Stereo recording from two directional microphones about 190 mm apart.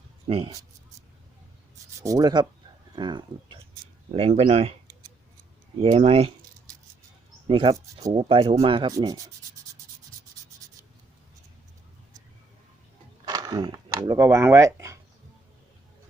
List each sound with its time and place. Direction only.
0.3 s speech: 30° right (ahead or behind)
2.0 s speech: 20° right (ahead or behind); by 4.7 s 35° right (ahead or behind)
5.8 s speech: 30° right (ahead or behind)
7.4 s speech: 25° right (ahead or behind)
13.2 s speech: 20° right (ahead or behind)